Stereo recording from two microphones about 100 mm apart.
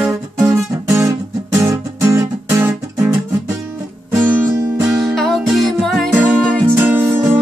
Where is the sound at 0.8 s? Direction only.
30° right (ahead or behind).